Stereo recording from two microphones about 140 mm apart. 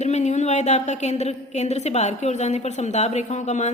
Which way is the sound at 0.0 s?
55° left (ahead or behind).